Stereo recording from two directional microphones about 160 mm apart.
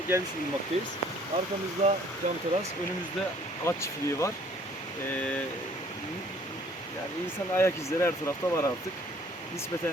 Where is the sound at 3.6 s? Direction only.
20° left (ahead or behind).